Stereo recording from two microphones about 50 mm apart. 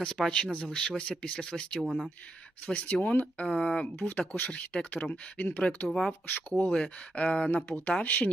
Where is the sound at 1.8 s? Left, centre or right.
Centre.